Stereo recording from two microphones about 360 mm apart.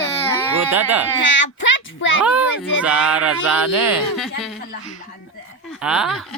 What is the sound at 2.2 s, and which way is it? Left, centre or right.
Speech, centre.